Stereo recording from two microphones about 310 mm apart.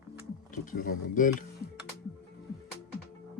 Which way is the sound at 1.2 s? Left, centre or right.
Left.